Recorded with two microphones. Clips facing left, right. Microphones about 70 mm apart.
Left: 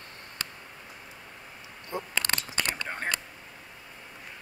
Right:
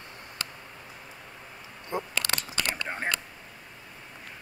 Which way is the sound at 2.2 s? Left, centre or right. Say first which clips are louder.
Even; left.